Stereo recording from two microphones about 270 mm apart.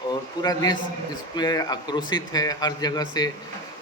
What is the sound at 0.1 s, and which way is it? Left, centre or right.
A man's voice, centre.